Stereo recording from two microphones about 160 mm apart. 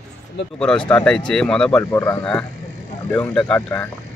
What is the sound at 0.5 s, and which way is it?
Speech, 5° left (ahead or behind).